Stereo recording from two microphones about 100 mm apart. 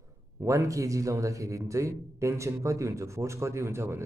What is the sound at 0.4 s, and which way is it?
A man's voice, 30° right (ahead or behind).